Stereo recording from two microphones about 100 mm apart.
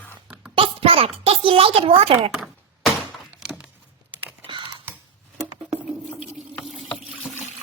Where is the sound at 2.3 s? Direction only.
5° right (ahead or behind).